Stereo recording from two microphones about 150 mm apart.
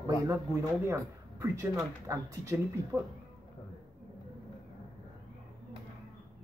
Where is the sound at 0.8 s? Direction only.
20° right (ahead or behind).